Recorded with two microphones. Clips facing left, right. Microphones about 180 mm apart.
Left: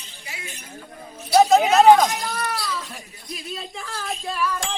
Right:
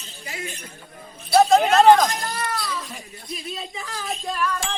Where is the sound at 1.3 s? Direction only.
5° left (ahead or behind).